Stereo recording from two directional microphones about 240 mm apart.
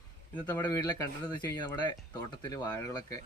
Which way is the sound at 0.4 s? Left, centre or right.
Centre.